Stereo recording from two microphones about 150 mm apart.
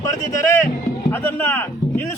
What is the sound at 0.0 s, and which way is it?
A man's voice, 20° left (ahead or behind).